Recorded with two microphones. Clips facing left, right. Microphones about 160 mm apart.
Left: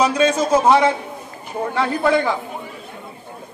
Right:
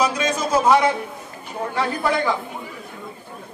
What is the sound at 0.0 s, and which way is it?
Speech, 25° left (ahead or behind).